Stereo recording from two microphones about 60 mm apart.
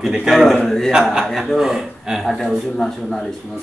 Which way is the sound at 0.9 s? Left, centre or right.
Centre.